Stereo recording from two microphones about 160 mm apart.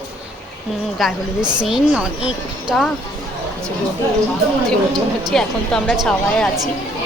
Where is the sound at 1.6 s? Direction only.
5° right (ahead or behind).